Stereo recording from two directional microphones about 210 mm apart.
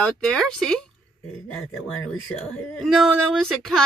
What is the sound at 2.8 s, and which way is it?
Speech, centre (ahead or behind).